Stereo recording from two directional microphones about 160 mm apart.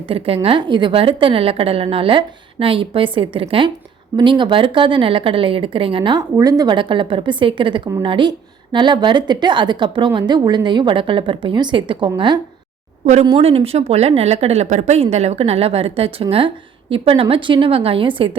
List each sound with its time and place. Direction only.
0.1 s a woman's voice: 35° right (ahead or behind)